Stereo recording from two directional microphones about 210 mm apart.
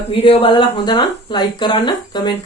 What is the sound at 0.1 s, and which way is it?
Speech, 25° left (ahead or behind).